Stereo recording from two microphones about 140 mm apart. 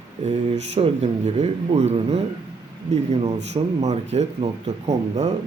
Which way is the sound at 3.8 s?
55° right (ahead or behind).